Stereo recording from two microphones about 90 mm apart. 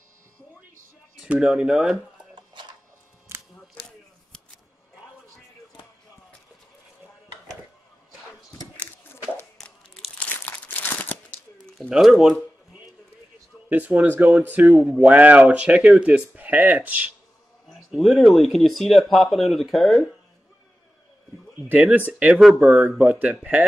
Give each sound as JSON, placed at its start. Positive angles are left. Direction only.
{"t": 1.2, "sound": "speech", "side_deg": -5}
{"t": 3.3, "sound": "a sound", "side_deg": -30}
{"t": 10.1, "sound": "crumpling", "side_deg": 20}
{"t": 11.9, "sound": "speech", "side_deg": -5}
{"t": 13.7, "sound": "speech", "side_deg": -15}
{"t": 17.6, "sound": "speech", "side_deg": 0}
{"t": 21.9, "sound": "speech", "side_deg": -15}